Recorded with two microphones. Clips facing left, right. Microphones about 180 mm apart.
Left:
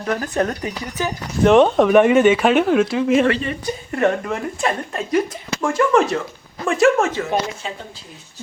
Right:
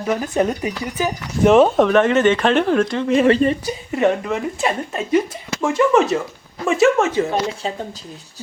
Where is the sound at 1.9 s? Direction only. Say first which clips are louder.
Left 2 dB; 10° left (ahead or behind).